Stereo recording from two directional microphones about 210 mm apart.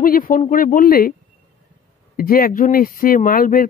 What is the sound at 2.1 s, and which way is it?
Speech, 45° left (ahead or behind).